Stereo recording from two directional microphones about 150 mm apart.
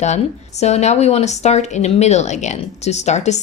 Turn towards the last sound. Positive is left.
turn(degrees=50)  # may be behind; listen again after turning